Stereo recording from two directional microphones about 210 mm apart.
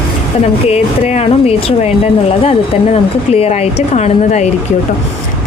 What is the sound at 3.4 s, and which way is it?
Speech, 30° left (ahead or behind).